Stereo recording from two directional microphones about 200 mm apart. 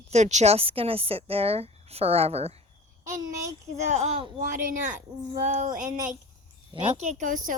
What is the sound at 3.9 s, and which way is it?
Speech, 30° right (ahead or behind).